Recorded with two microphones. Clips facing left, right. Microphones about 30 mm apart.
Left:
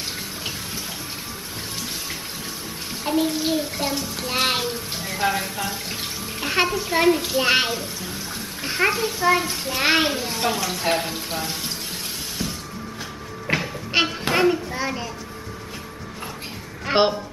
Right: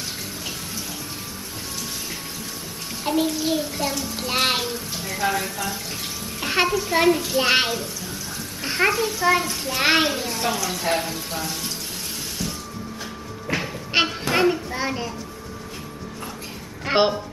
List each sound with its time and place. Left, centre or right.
3.0 s a sound: centre
3.3 s a child's voice: centre
4.2 s a child's voice: centre
5.1 s a child's voice: centre
6.4 s a sound: centre
6.9 s a child's voice: centre
9.8 s a child's voice: centre
10.1 s a child's voice: centre
12.4 s music: left
13.6 s music: centre
14.3 s a child's voice: centre
16.8 s a child's voice: centre